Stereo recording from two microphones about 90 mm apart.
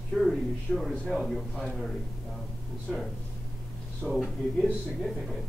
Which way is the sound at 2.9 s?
5° left (ahead or behind).